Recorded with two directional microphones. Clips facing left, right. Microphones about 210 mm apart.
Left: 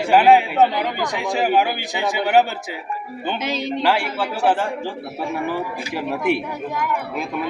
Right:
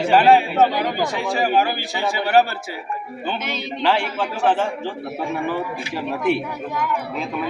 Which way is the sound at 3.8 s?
10° left (ahead or behind).